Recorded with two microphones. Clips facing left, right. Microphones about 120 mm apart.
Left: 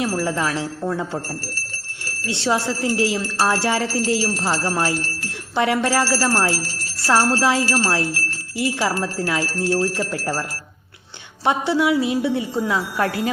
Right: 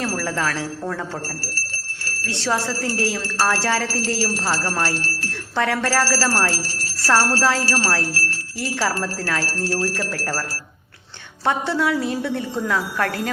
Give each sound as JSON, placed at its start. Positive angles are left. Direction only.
{"t": 0.0, "sound": "speech", "side_deg": 15}
{"t": 11.4, "sound": "speech", "side_deg": 15}